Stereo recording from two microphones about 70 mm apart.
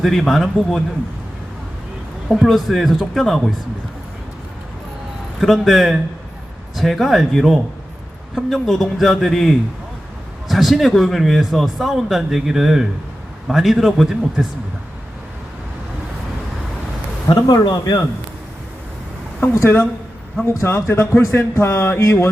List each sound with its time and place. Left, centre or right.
0.0 s speech: centre
2.3 s speech: centre
5.4 s speech: centre
17.5 s speech: left
19.4 s speech: left